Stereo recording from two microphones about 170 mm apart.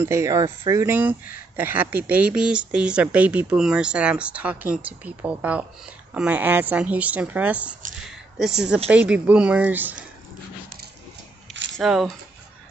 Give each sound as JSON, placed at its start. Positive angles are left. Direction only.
{"t": 0.0, "sound": "speech", "side_deg": -15}
{"t": 11.7, "sound": "speech", "side_deg": 0}